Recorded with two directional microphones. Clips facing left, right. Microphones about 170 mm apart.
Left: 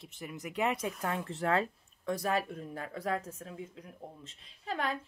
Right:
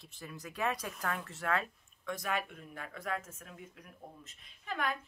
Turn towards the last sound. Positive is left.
turn(degrees=30)  # may be behind; listen again after turning